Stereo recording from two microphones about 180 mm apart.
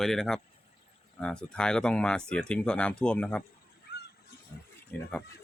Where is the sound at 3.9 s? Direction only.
65° left (ahead or behind).